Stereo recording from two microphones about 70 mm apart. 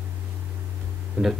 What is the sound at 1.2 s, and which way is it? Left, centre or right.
Speech, centre.